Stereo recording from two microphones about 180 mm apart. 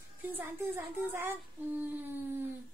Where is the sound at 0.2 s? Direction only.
10° right (ahead or behind).